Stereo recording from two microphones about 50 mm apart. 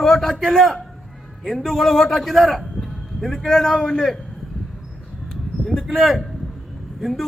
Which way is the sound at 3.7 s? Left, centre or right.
Centre.